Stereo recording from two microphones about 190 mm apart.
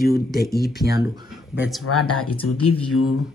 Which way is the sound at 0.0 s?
55° left (ahead or behind).